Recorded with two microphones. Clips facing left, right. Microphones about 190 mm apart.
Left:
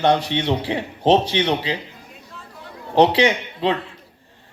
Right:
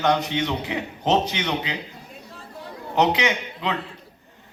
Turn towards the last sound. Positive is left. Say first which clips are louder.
# left 6 dB
turn(degrees=30)  # may be behind; listen again after turning